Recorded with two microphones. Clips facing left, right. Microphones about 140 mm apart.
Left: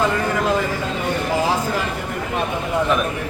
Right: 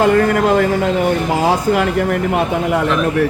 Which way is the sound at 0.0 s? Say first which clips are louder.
Right 7 dB; 60° right (ahead or behind).